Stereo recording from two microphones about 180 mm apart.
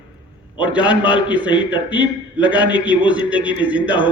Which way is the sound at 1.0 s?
25° left (ahead or behind).